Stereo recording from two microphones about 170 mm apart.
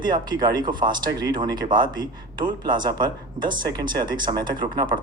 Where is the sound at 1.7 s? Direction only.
55° right (ahead or behind).